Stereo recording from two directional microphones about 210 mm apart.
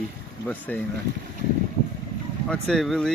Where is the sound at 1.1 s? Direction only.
55° right (ahead or behind).